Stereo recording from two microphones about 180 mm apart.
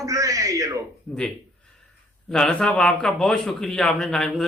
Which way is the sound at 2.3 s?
5° left (ahead or behind).